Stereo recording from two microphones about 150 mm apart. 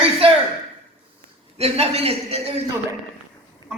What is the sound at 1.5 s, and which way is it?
A man's voice, 40° right (ahead or behind).